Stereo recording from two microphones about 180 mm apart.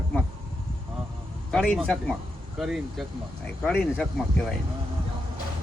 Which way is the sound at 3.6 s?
10° left (ahead or behind).